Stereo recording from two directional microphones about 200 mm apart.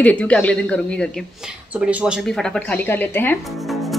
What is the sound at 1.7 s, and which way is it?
A woman's voice, 5° right (ahead or behind).